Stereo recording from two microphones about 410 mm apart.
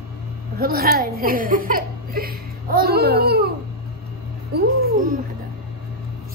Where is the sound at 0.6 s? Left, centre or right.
Right.